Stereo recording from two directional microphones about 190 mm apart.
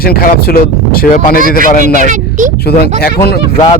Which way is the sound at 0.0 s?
50° left (ahead or behind).